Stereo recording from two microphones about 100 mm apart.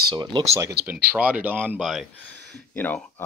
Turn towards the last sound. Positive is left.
turn(degrees=15)  # may be behind; listen again after turning